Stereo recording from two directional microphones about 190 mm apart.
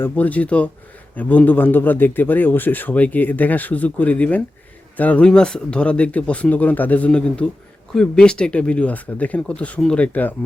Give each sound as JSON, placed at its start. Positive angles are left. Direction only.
{"t": 0.0, "sound": "a man's voice", "side_deg": 10}